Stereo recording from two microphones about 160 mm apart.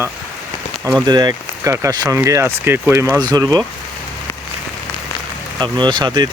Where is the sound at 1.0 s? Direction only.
25° right (ahead or behind).